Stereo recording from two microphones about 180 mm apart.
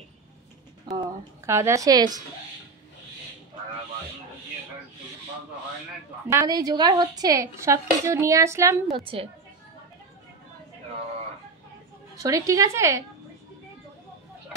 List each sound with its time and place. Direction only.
0.9 s speech: 20° right (ahead or behind)
6.2 s speech: 20° right (ahead or behind)
8.9 s a woman's voice: 30° right (ahead or behind)
12.2 s speech: 20° right (ahead or behind)